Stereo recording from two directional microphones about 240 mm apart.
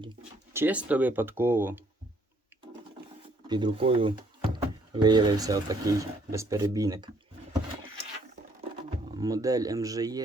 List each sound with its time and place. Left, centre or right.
0.5 s speech: centre
3.4 s speech: centre
9.1 s speech: centre